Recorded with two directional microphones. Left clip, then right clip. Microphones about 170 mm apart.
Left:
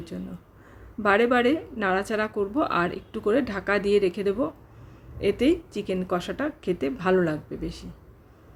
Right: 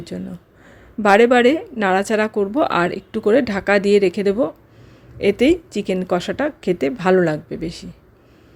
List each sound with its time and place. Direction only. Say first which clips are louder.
0.1 s a woman's voice: right 7 dB; 40° right (ahead or behind)